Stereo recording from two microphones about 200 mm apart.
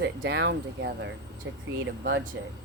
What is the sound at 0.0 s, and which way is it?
Speech, 60° right (ahead or behind).